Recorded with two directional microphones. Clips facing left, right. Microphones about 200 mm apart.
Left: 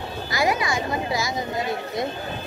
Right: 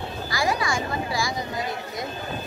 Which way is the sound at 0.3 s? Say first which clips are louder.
Left 2 dB; 20° left (ahead or behind).